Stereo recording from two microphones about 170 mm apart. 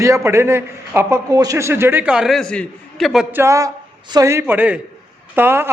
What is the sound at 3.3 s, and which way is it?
Speech, 15° right (ahead or behind).